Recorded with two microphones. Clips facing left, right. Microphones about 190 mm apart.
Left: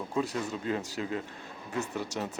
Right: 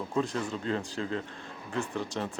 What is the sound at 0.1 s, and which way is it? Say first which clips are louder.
Speech: right 1 dB; 10° left (ahead or behind).